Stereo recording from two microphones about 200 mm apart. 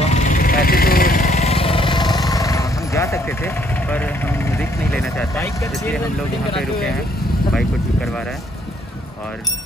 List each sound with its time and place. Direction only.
0.0 s vehicle: 35° left (ahead or behind); by 5.2 s 5° left (ahead or behind)
6.5 s speech: centre (ahead or behind)